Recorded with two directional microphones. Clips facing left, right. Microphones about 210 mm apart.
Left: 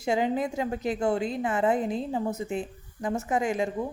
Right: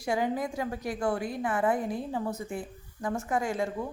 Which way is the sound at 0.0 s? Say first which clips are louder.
Left 3 dB; 20° left (ahead or behind).